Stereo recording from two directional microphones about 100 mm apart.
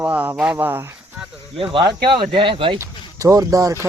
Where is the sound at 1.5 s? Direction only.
60° right (ahead or behind).